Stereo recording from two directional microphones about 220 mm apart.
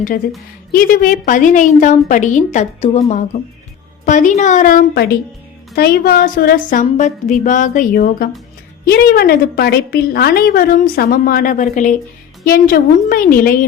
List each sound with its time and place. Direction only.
0.7 s a woman's voice: 40° left (ahead or behind)